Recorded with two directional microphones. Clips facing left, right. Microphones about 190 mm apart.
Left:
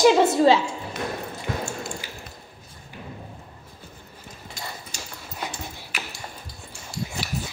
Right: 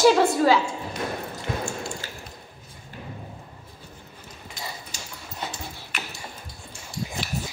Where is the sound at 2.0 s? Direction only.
15° left (ahead or behind).